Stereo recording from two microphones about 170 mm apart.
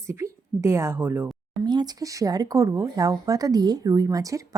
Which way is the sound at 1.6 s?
25° right (ahead or behind).